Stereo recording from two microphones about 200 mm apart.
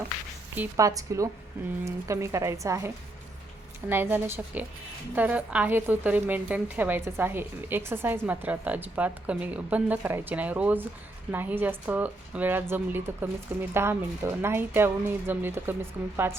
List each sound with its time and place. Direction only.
0.5 s a woman's voice: 10° right (ahead or behind)